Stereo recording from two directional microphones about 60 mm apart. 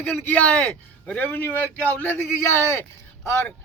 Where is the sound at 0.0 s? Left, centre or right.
Left.